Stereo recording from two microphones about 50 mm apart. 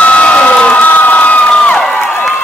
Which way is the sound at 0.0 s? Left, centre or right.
Left.